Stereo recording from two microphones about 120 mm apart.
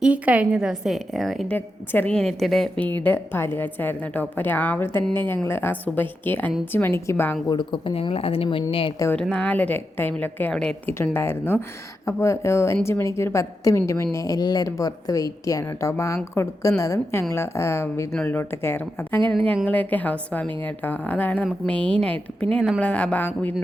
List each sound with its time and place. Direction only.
0.0 s a woman's voice: 10° right (ahead or behind)
1.5 s a woman's voice: 15° left (ahead or behind)
2.8 s a woman's voice: 15° left (ahead or behind)
7.4 s speech: 40° left (ahead or behind)
9.3 s a woman's voice: 10° left (ahead or behind)
10.5 s a woman's voice: 5° left (ahead or behind)
10.8 s a woman's voice: 15° left (ahead or behind)